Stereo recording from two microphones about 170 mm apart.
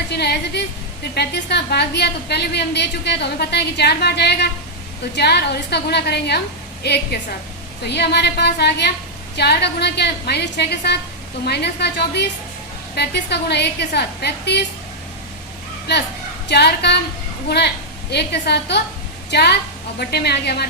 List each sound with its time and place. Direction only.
0.1 s a sound: 75° left (ahead or behind)
1.1 s a woman's voice: 75° left (ahead or behind)
15.9 s a woman's voice: 80° left
18.1 s a woman's voice: 75° left (ahead or behind)